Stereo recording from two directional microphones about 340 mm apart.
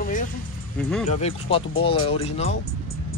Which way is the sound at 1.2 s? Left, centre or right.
Centre.